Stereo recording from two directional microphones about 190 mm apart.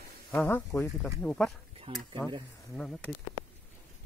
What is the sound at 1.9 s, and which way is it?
Speech, 30° right (ahead or behind).